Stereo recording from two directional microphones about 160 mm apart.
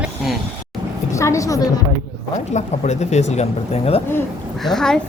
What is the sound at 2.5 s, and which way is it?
Speech, 45° left (ahead or behind).